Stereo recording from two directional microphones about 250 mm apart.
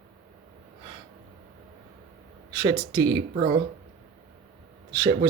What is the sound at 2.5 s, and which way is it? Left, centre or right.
Speech, centre.